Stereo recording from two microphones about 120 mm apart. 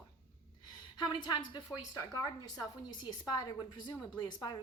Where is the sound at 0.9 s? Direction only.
35° left (ahead or behind).